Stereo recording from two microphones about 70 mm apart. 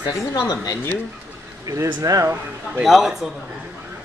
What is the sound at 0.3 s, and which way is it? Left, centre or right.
Speech, left.